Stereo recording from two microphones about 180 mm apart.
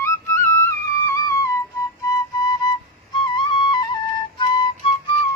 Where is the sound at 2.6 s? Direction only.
20° left (ahead or behind).